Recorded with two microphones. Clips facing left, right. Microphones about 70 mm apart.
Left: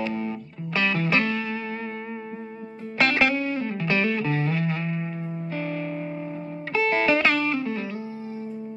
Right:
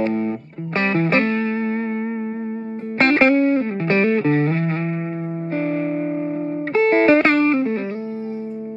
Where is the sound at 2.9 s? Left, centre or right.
Right.